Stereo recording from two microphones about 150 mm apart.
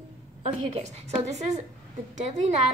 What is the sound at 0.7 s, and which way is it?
Speech, 45° right (ahead or behind).